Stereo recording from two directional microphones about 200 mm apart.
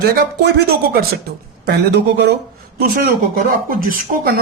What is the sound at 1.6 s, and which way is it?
Speech, 55° right (ahead or behind).